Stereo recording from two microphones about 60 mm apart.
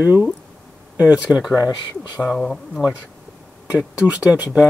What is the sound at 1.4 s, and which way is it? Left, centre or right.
Speech, centre.